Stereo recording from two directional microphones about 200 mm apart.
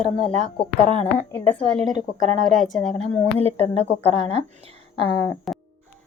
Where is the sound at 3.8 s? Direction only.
30° right (ahead or behind).